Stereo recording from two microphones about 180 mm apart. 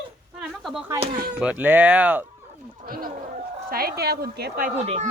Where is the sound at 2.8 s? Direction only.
55° right (ahead or behind).